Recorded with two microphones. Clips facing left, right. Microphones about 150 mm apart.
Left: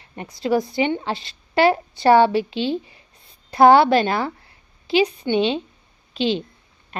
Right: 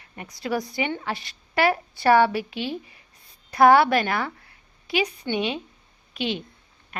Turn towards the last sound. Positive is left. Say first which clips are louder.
# left 6 dB
turn(degrees=30)  # may be behind; listen again after turning